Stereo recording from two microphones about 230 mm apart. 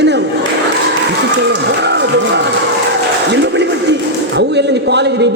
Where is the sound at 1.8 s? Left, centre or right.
Right.